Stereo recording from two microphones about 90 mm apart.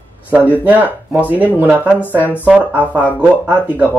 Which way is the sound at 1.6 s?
20° right (ahead or behind).